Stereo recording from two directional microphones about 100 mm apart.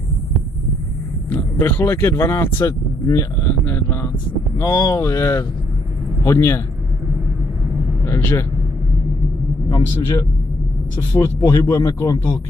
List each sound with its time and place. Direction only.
1.3 s speech: 20° left (ahead or behind)
3.4 s speech: 20° left (ahead or behind)
4.6 s speech: 35° left (ahead or behind)
8.0 s speech: 25° left (ahead or behind)
9.7 s speech: 40° left (ahead or behind)